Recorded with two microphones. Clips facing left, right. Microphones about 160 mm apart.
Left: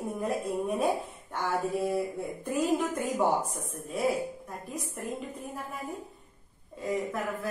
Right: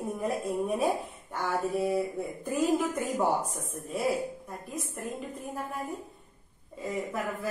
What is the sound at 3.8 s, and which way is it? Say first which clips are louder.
Speech: left 1 dB; centre (ahead or behind).